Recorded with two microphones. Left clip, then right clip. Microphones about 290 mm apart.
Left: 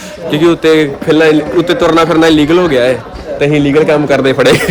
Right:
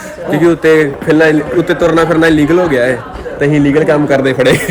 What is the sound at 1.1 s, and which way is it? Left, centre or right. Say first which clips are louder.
A man's voice: left 2 dB; centre.